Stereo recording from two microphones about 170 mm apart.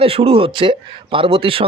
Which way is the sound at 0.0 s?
35° right (ahead or behind).